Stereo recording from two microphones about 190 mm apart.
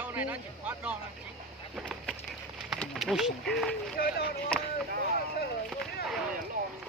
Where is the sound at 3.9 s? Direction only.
50° left (ahead or behind).